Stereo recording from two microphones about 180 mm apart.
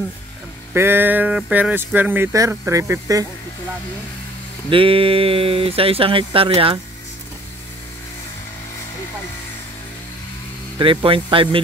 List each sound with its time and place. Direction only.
0.7 s speech: 10° right (ahead or behind)
4.6 s speech: 30° right (ahead or behind)
10.8 s speech: 30° right (ahead or behind)